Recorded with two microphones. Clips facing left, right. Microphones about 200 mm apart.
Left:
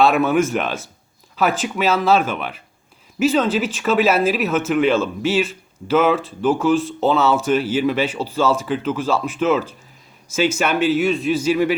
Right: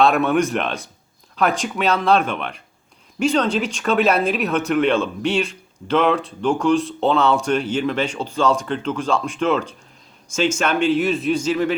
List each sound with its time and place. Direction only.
0.0 s a man's voice: centre (ahead or behind)